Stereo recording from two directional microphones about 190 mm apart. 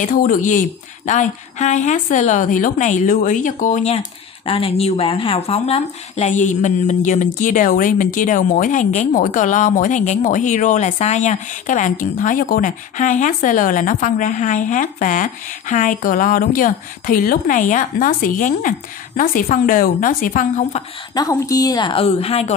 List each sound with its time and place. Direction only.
0.0 s a woman's voice: 45° left (ahead or behind)
21.1 s a woman's voice: 20° left (ahead or behind)